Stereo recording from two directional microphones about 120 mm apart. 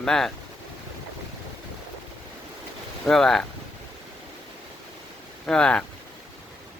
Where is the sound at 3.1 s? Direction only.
5° left (ahead or behind).